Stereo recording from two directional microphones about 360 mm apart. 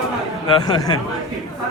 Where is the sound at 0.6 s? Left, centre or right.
Centre.